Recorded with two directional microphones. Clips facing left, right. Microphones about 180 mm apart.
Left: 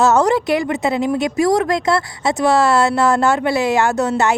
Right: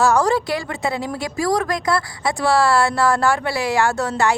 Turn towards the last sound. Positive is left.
turn(degrees=20)  # may be behind; listen again after turning